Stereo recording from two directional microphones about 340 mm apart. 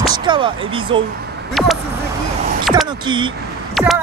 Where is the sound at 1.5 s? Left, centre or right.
Centre.